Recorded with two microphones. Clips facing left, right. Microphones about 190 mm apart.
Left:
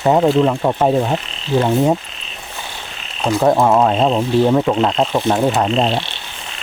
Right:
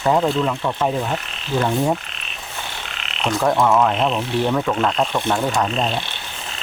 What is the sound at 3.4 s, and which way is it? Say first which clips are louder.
Speech: left 4 dB; 25° left (ahead or behind).